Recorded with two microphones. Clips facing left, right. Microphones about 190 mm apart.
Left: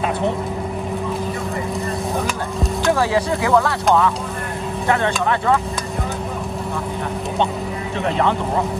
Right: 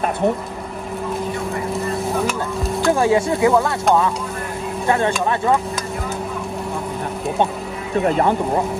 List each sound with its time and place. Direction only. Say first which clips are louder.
2.9 s speech: right 2 dB; 25° right (ahead or behind)
4.8 s speech: right 1 dB; 20° right (ahead or behind)